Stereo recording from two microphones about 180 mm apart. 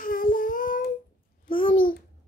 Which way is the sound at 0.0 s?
50° left (ahead or behind).